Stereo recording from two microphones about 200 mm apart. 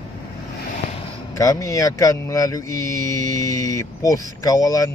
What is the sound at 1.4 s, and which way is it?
Speech, 15° left (ahead or behind).